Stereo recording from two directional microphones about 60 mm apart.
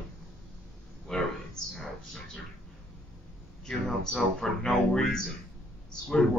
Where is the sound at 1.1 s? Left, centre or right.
Centre.